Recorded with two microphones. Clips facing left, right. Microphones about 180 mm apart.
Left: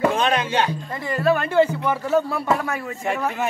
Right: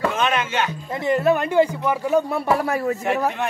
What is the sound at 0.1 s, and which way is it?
Music, 35° left (ahead or behind).